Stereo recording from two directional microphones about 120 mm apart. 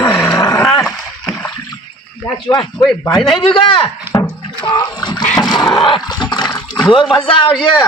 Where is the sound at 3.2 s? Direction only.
40° left (ahead or behind).